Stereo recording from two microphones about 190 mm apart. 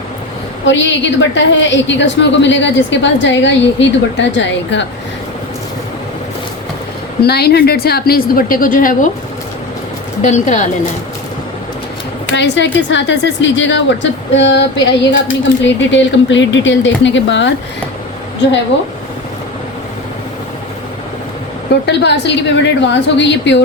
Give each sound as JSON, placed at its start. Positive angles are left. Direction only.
{"t": 0.6, "sound": "a woman's voice", "side_deg": 75}
{"t": 7.2, "sound": "a woman's voice", "side_deg": 55}
{"t": 10.2, "sound": "speech", "side_deg": 40}
{"t": 12.3, "sound": "a woman's voice", "side_deg": 70}
{"t": 21.7, "sound": "a woman's voice", "side_deg": 65}